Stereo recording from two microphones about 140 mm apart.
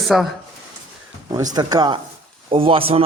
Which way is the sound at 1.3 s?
30° right (ahead or behind).